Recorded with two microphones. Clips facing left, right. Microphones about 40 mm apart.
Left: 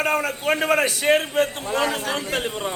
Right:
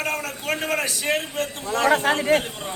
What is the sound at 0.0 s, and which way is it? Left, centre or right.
Speech, left.